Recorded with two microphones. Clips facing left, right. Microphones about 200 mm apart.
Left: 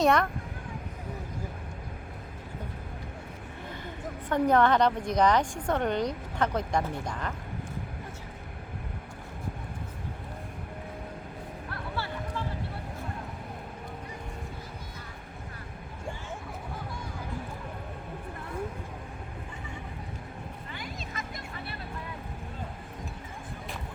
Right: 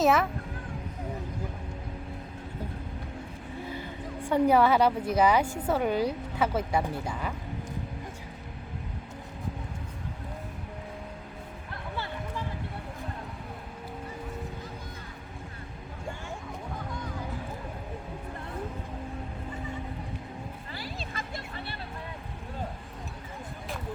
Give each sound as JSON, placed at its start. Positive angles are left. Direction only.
{"t": 0.0, "sound": "a child's voice", "side_deg": -5}
{"t": 3.7, "sound": "speech", "side_deg": -10}
{"t": 20.7, "sound": "music", "side_deg": -30}